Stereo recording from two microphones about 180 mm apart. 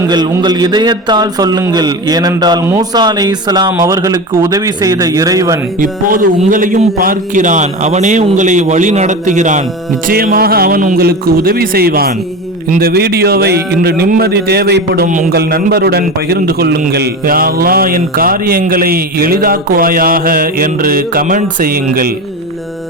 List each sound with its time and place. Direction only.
0.1 s a man's voice: 25° right (ahead or behind)
5.8 s a man's voice: 50° right (ahead or behind)
10.1 s a man's voice: 55° right (ahead or behind)
15.0 s a man's voice: 45° right (ahead or behind)
15.4 s a man's voice: 60° right (ahead or behind)